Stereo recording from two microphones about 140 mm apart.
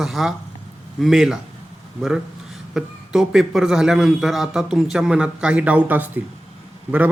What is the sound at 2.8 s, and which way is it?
A man's voice, 5° right (ahead or behind).